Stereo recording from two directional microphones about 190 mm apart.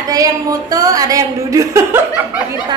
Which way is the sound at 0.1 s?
20° right (ahead or behind).